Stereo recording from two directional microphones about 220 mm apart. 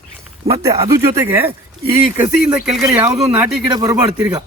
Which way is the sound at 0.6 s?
15° right (ahead or behind).